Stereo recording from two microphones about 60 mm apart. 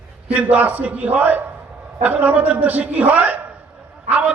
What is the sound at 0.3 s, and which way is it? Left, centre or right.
A man's voice, right.